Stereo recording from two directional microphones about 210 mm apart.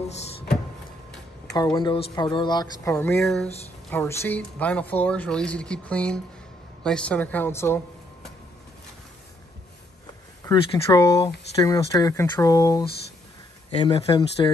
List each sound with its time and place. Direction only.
1.5 s speech: 20° left (ahead or behind)
3.2 s speech: centre (ahead or behind)
10.4 s speech: 20° left (ahead or behind)
13.7 s speech: 30° left (ahead or behind)